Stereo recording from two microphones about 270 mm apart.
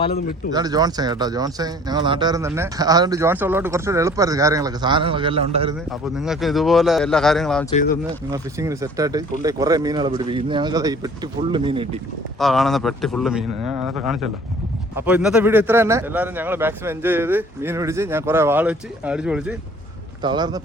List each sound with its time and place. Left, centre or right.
0.5 s speech: centre
5.9 s a man's voice: centre
8.3 s speech: centre
12.4 s a man's voice: centre
20.2 s speech: centre